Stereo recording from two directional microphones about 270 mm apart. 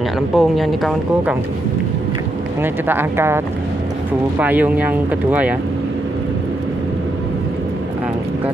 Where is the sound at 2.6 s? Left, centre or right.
Centre.